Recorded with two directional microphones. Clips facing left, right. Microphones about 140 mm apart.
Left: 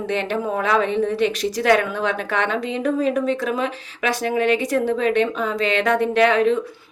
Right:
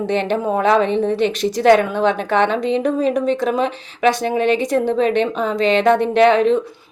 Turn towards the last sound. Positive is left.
turn(degrees=-25)  # may be behind; listen again after turning